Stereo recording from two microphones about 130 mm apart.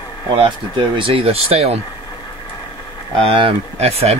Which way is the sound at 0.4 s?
40° right (ahead or behind).